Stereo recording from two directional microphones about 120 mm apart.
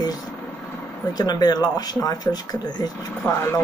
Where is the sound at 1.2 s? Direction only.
35° left (ahead or behind).